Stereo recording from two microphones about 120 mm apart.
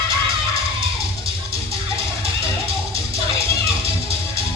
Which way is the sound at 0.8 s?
50° right (ahead or behind).